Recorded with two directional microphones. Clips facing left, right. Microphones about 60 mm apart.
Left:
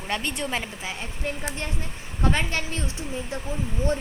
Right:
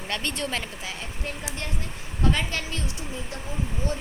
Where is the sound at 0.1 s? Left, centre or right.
Centre.